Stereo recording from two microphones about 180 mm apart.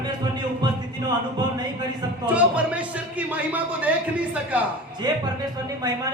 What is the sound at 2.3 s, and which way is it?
Speech, 5° right (ahead or behind).